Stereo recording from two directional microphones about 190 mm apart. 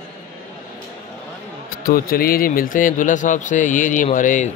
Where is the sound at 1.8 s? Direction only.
50° left (ahead or behind).